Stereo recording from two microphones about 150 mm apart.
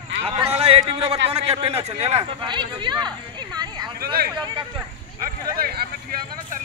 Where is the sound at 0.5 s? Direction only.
40° right (ahead or behind).